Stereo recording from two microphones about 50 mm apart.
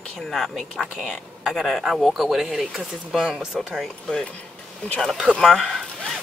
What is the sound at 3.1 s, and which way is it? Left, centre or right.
Speech, centre.